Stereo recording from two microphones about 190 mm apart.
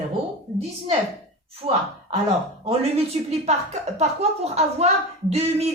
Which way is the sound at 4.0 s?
35° right (ahead or behind).